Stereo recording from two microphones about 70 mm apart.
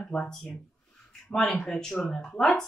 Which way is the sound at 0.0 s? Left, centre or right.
Centre.